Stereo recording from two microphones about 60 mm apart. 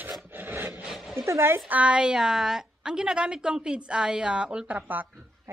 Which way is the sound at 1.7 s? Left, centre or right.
Right.